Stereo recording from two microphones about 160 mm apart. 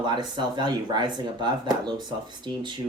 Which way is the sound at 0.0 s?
30° right (ahead or behind).